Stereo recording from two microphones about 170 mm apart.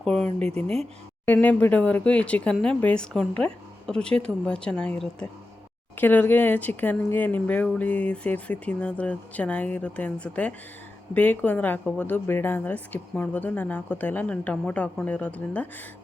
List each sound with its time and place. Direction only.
0.0 s speech: centre (ahead or behind)